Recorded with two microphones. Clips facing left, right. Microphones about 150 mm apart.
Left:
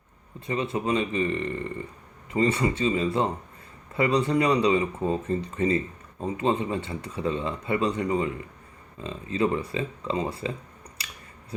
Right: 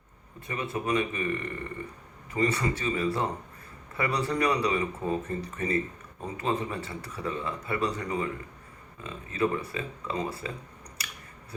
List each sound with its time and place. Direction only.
0.4 s a man's voice: 25° left (ahead or behind)